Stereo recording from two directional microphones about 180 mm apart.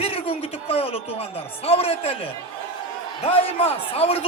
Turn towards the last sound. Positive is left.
turn(degrees=35)  # may be behind; listen again after turning